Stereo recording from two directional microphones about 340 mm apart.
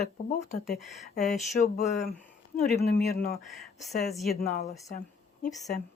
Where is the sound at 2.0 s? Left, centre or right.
Centre.